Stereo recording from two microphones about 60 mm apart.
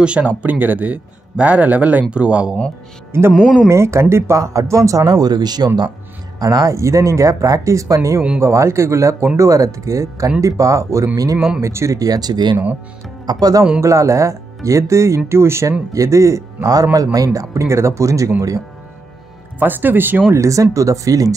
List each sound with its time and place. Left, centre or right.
0.0 s speech: centre
0.4 s speech: right
3.1 s speech: right
3.3 s speech: centre
3.6 s speech: right
6.4 s speech: right
8.4 s speech: right
9.4 s speech: right
13.4 s speech: right
13.7 s speech: right
15.9 s speech: right
16.6 s speech: right
19.6 s speech: right
20.3 s speech: right